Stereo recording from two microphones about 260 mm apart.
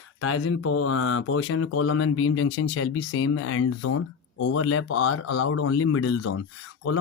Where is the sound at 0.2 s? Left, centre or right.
Left.